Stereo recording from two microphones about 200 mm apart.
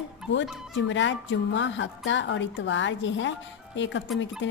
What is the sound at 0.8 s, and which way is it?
A woman's voice, 65° left (ahead or behind).